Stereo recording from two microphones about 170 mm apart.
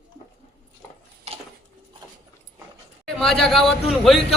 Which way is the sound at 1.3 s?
40° right (ahead or behind).